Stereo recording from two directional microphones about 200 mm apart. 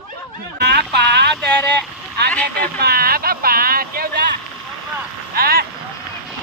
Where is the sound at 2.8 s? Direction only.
50° right (ahead or behind).